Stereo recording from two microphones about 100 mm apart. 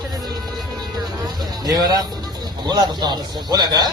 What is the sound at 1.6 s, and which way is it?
A man's voice, 40° right (ahead or behind).